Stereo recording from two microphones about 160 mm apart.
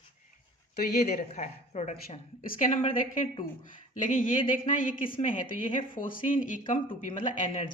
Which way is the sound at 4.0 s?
55° left (ahead or behind).